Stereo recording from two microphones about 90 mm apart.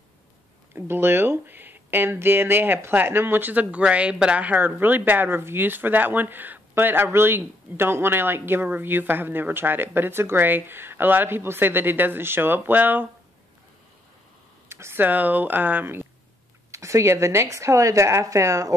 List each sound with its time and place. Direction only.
0.7 s speech: 25° right (ahead or behind)
14.7 s speech: 30° right (ahead or behind)